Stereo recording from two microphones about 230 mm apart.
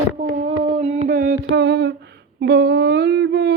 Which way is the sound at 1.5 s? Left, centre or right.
Right.